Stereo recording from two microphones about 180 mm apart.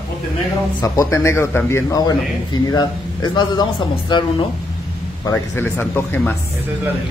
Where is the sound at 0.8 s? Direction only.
15° left (ahead or behind).